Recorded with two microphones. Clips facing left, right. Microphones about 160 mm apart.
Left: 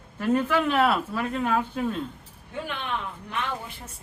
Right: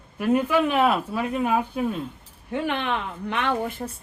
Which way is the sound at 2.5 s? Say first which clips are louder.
Right 6 dB; 75° right (ahead or behind).